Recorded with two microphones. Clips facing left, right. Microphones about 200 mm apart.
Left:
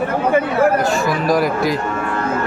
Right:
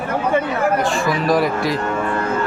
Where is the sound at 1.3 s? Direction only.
Centre (ahead or behind).